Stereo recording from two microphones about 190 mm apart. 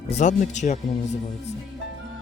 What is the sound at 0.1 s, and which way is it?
Speech, 40° left (ahead or behind).